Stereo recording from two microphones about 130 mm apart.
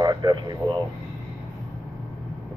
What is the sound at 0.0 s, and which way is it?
Speech, 30° right (ahead or behind).